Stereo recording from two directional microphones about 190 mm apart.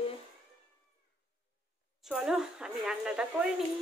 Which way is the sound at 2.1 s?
5° right (ahead or behind).